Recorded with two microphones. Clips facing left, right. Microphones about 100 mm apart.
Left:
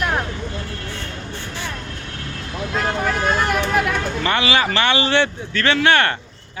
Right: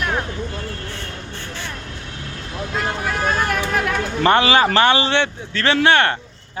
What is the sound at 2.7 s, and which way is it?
Vehicle, centre (ahead or behind).